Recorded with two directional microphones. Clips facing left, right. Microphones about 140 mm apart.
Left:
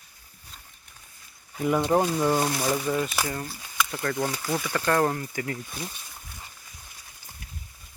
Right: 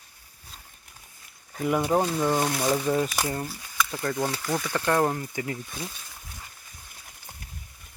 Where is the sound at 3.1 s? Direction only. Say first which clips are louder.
Right 1 dB; 25° right (ahead or behind).